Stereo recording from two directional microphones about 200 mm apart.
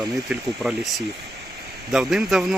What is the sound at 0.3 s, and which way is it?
Speech, 5° right (ahead or behind).